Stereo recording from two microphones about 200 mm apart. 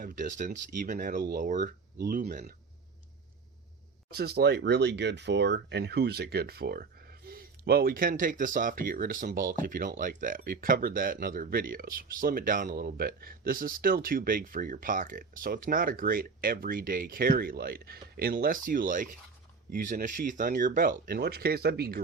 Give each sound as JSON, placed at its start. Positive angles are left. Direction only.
{"t": 0.0, "sound": "speech", "side_deg": -40}
{"t": 2.0, "sound": "speech", "side_deg": -50}
{"t": 4.1, "sound": "speech", "side_deg": -50}